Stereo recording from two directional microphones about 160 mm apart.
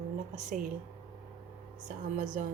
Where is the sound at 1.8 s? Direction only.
50° right (ahead or behind).